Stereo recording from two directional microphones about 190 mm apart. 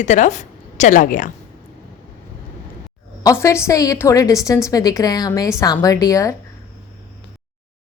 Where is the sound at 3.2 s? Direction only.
15° left (ahead or behind).